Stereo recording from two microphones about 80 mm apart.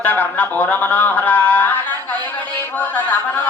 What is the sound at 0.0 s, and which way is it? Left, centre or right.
Speech, left.